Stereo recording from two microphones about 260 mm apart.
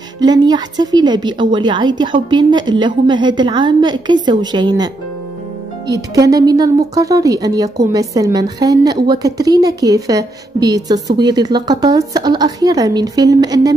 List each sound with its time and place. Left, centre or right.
0.2 s speech: centre